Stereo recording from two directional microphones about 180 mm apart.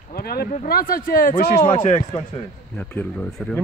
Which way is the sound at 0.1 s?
60° left (ahead or behind).